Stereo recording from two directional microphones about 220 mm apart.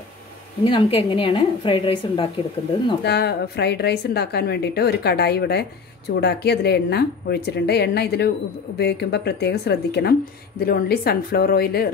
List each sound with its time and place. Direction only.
0.7 s a woman's voice: 25° left (ahead or behind)
3.0 s a woman's voice: 50° left (ahead or behind)